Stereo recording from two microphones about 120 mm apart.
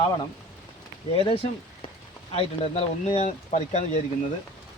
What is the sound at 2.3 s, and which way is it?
Speech, 65° left (ahead or behind).